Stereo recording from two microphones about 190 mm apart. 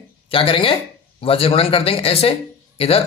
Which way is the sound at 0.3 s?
30° left (ahead or behind).